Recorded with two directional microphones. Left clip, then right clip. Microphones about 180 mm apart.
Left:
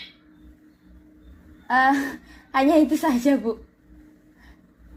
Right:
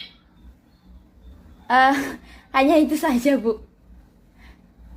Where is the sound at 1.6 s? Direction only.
20° right (ahead or behind).